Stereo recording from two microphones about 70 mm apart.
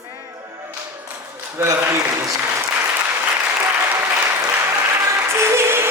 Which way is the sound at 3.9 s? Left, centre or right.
Right.